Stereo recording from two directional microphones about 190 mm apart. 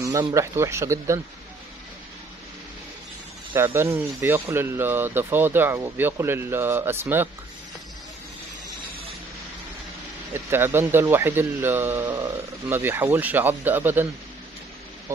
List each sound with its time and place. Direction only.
0.0 s speech: 15° right (ahead or behind)
3.5 s speech: 15° right (ahead or behind)
10.3 s speech: 10° right (ahead or behind)